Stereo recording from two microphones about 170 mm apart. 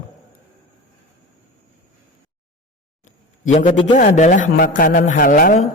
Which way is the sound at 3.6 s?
30° left (ahead or behind).